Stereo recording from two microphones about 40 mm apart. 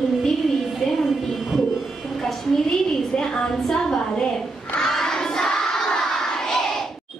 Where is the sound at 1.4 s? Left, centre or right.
Centre.